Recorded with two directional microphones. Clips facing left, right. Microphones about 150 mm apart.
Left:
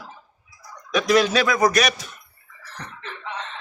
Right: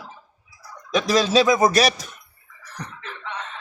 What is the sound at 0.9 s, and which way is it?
A man's voice, 30° right (ahead or behind).